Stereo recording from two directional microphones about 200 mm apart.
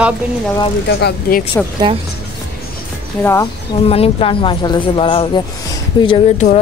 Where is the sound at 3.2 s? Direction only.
15° left (ahead or behind).